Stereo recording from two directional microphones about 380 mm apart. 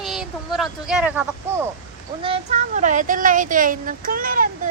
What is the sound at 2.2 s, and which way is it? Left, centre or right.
Speech, centre.